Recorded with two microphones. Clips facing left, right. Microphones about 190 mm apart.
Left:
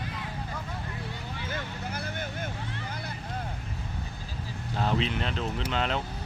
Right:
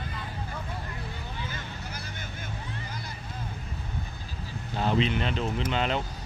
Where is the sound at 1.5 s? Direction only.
55° left (ahead or behind).